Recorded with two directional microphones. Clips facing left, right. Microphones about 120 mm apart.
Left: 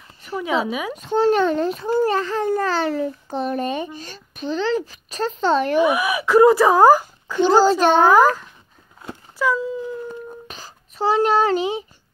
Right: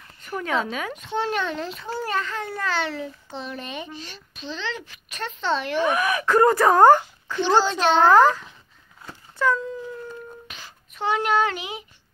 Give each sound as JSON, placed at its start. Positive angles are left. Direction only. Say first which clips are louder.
{"t": 0.4, "sound": "a child's voice", "louder": "left 4 dB", "side_deg": 10}
{"t": 0.9, "sound": "a child's voice", "louder": "left 10 dB", "side_deg": 40}
{"t": 5.8, "sound": "a child's voice", "louder": "left 4 dB", "side_deg": 10}
{"t": 7.3, "sound": "a child's voice", "louder": "left 6 dB", "side_deg": 40}
{"t": 8.1, "sound": "a child's voice", "louder": "left 1 dB", "side_deg": 10}
{"t": 9.4, "sound": "a sound", "louder": "left 2 dB", "side_deg": 5}
{"t": 10.5, "sound": "a child's voice", "louder": "left 4 dB", "side_deg": 35}